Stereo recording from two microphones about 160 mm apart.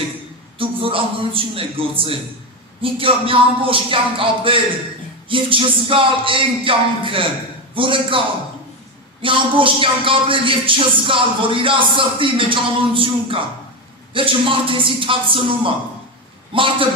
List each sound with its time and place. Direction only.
0.6 s speech: 35° right (ahead or behind)
9.2 s speech: 35° right (ahead or behind)